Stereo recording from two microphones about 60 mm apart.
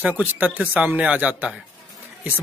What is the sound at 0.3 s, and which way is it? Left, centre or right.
A man's voice, right.